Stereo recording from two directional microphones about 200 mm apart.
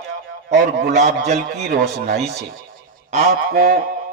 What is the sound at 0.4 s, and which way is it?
A man's voice, 55° right (ahead or behind).